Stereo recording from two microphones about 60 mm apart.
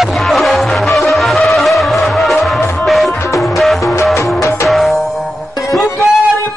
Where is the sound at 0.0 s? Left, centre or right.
Centre.